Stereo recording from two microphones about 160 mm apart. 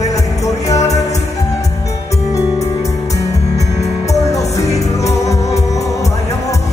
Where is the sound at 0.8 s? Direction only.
45° left (ahead or behind).